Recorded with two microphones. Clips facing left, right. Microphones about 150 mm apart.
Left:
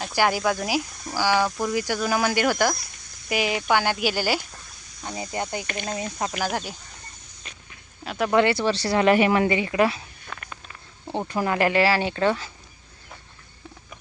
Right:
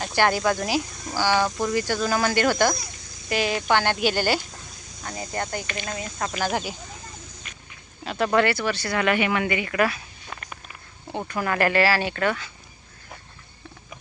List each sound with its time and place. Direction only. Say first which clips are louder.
0.0 s speech: right 1 dB; 5° left (ahead or behind)
5.0 s speech: left 1 dB; 20° left (ahead or behind)
6.3 s speech: right 1 dB; centre (ahead or behind)
8.0 s speech: left 1 dB; 10° left (ahead or behind)
8.5 s speech: left 4 dB; 30° left (ahead or behind)
11.3 s speech: left 1 dB; 25° left (ahead or behind)